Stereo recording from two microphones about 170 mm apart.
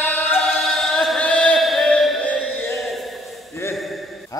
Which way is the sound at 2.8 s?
Centre (ahead or behind).